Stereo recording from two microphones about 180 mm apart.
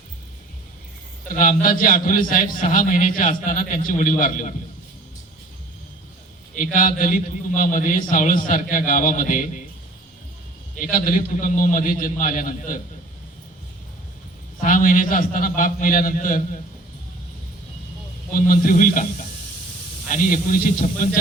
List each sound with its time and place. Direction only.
1.3 s a man's voice: 50° left (ahead or behind)
6.5 s a man's voice: 50° left (ahead or behind)
10.8 s a man's voice: 50° left (ahead or behind)
14.6 s a man's voice: 50° left (ahead or behind)
18.3 s a man's voice: 50° left (ahead or behind)
20.1 s a man's voice: 50° left (ahead or behind)